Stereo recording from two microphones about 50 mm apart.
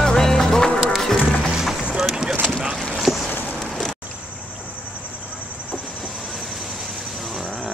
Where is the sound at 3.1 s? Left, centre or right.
Centre.